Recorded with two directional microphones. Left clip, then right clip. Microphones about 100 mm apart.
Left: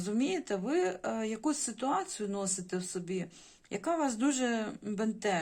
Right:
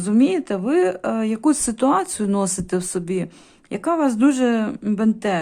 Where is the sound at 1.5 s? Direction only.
60° right (ahead or behind).